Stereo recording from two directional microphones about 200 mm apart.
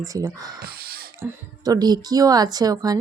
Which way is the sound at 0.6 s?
50° right (ahead or behind).